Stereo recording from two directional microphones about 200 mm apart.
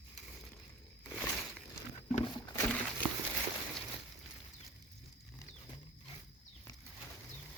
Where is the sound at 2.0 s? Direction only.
35° left (ahead or behind).